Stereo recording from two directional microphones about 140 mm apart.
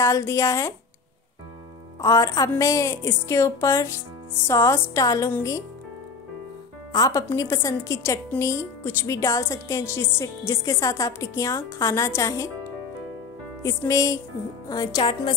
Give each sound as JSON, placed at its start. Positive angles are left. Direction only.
{"t": 0.0, "sound": "a woman's voice", "side_deg": 20}
{"t": 2.0, "sound": "a woman's voice", "side_deg": 20}
{"t": 6.9, "sound": "a woman's voice", "side_deg": 25}
{"t": 13.6, "sound": "a woman's voice", "side_deg": 20}